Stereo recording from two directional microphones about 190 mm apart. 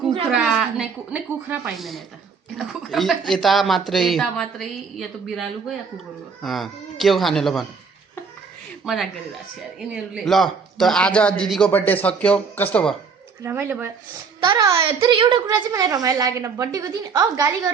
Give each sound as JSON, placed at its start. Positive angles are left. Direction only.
{"t": 0.3, "sound": "speech", "side_deg": -5}
{"t": 8.8, "sound": "speech", "side_deg": 0}
{"t": 13.4, "sound": "a child's voice", "side_deg": -10}